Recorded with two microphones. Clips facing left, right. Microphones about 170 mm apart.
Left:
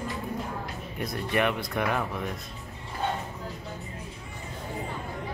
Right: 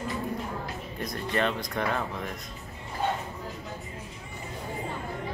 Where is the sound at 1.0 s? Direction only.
15° left (ahead or behind).